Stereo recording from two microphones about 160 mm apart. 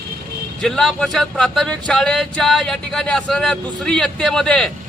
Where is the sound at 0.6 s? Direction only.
5° left (ahead or behind).